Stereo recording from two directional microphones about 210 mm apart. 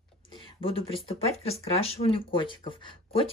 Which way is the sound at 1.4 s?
30° left (ahead or behind).